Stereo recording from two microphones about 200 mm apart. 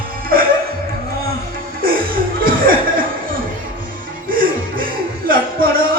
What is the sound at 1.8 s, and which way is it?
Chuckle, 45° right (ahead or behind).